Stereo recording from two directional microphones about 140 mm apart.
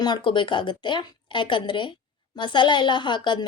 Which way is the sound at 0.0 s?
35° left (ahead or behind).